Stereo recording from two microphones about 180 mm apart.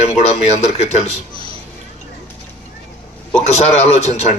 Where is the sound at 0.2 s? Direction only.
40° left (ahead or behind).